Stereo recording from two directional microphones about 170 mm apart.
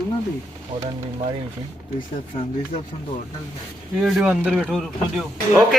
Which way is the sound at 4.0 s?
5° right (ahead or behind).